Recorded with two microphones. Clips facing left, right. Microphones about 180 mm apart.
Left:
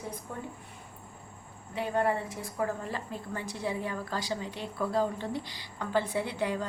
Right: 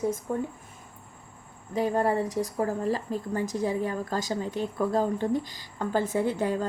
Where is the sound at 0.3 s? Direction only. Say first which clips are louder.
Right 10 dB; 45° right (ahead or behind).